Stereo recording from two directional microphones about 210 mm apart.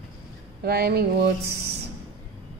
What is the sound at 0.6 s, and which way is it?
Speech, 50° right (ahead or behind).